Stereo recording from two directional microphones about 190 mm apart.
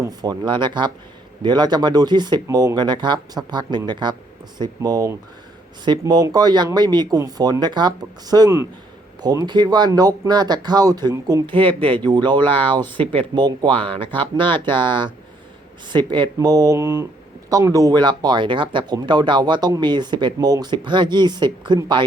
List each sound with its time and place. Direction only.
0.0 s speech: 20° right (ahead or behind)